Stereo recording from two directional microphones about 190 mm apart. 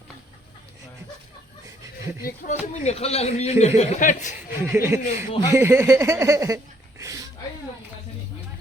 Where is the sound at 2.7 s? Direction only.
35° left (ahead or behind).